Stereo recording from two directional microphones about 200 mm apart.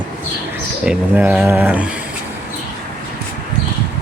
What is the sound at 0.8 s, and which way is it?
Speech, 5° right (ahead or behind).